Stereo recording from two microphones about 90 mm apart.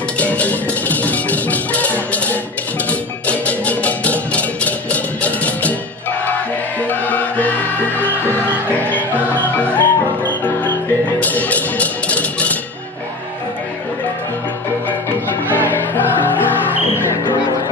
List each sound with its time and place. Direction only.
0.2 s music: 15° left (ahead or behind)
6.9 s music: 20° left (ahead or behind)
15.5 s music: 20° left (ahead or behind)